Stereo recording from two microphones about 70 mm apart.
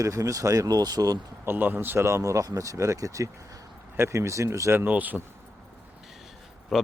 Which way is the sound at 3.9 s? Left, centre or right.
Right.